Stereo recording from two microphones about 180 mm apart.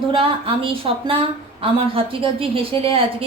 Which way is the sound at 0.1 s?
30° right (ahead or behind).